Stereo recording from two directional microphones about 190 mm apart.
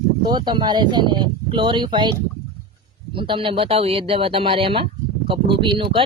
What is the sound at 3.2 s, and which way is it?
Speech, 25° right (ahead or behind).